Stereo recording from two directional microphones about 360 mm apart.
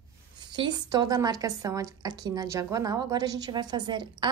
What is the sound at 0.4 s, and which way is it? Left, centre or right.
Speech, centre.